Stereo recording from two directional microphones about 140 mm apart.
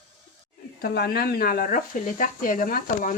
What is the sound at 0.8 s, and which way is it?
Speech, 90° left.